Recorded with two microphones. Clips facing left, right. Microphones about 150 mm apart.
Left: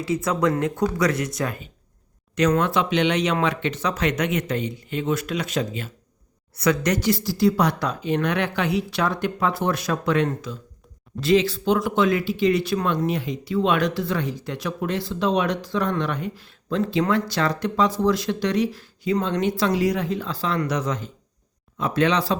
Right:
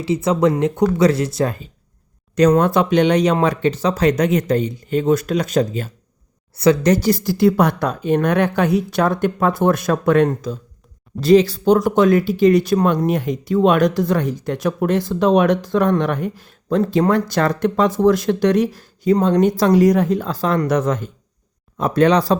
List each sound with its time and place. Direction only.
0.0 s speech: 25° right (ahead or behind); by 5.9 s 40° right (ahead or behind)
6.6 s speech: 30° right (ahead or behind)
7.3 s speech: 55° right (ahead or behind)